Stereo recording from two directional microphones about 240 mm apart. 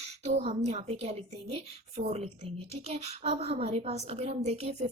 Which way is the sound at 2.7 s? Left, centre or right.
Right.